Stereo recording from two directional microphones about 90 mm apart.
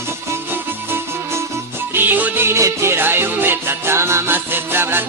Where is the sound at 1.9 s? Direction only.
20° right (ahead or behind).